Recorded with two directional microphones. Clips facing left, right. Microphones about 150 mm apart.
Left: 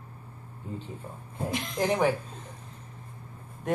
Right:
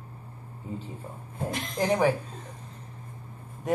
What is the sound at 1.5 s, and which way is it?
Speech, centre (ahead or behind).